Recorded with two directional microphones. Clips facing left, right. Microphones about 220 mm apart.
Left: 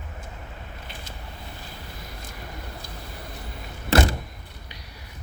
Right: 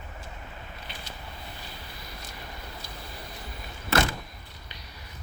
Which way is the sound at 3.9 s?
35° left (ahead or behind).